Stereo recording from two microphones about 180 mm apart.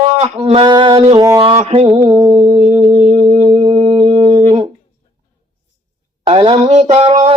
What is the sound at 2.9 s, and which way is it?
Speech, 30° right (ahead or behind).